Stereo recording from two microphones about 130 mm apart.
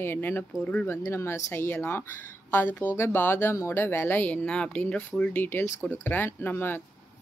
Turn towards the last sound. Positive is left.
turn(degrees=15)  # may be behind; listen again after turning